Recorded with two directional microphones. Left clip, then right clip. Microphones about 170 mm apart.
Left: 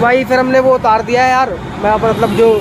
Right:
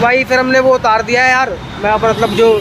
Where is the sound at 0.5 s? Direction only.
Centre (ahead or behind).